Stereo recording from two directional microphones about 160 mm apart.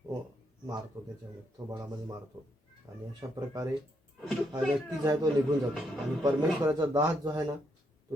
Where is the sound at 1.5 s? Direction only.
25° right (ahead or behind).